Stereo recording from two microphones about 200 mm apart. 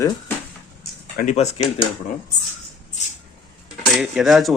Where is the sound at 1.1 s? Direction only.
40° left (ahead or behind).